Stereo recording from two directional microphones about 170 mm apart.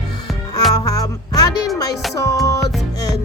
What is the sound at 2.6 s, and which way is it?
Music, centre (ahead or behind).